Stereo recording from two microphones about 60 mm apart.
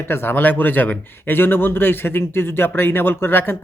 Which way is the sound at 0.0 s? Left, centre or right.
Left.